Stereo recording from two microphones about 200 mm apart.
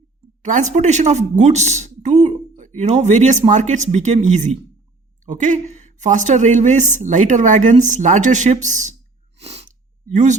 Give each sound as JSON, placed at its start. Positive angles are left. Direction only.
{"t": 0.4, "sound": "a woman's voice", "side_deg": -35}
{"t": 9.4, "sound": "sniff", "side_deg": -30}